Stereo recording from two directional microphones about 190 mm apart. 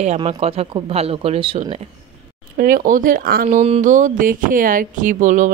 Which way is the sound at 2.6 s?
50° right (ahead or behind).